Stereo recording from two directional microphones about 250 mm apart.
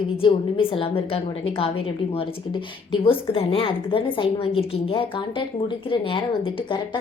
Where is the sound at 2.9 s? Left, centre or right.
Left.